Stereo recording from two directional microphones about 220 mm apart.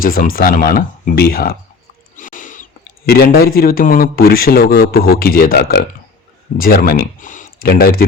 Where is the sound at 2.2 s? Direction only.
35° left (ahead or behind).